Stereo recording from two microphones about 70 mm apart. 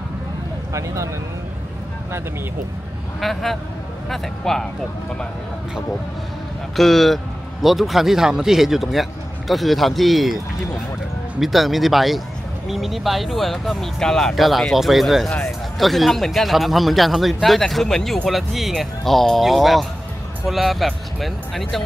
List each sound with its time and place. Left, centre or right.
0.7 s speech: right
3.2 s speech: centre
6.8 s speech: centre